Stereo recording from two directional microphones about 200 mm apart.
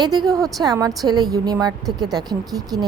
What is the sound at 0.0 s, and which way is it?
A woman's voice, 20° right (ahead or behind).